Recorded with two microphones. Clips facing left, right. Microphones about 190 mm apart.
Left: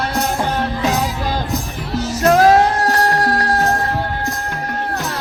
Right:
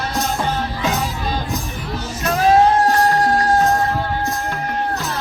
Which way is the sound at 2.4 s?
80° left.